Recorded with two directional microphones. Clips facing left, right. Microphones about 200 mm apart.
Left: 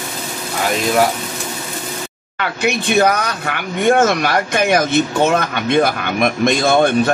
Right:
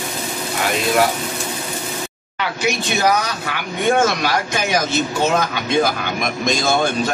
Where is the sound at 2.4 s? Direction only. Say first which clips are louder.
Left 2 dB; 55° left (ahead or behind).